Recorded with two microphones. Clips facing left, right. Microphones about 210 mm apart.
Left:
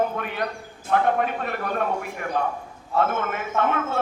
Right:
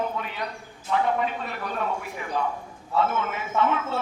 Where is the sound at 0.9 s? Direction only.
55° left (ahead or behind).